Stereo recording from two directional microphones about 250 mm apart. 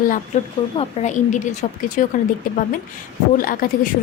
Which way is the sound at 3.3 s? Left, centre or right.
Left.